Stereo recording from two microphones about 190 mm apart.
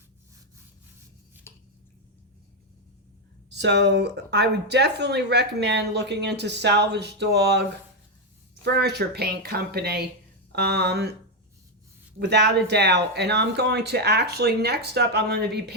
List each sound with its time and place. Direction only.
1.5 s a sound: 15° left (ahead or behind)
3.5 s speech: 65° right (ahead or behind)
12.2 s speech: 65° right (ahead or behind)